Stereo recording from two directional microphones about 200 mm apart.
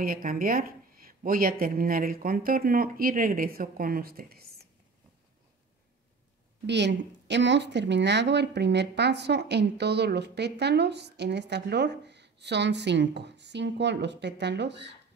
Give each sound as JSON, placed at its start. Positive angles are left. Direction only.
{"t": 0.0, "sound": "speech", "side_deg": -45}
{"t": 6.6, "sound": "a woman's voice", "side_deg": -60}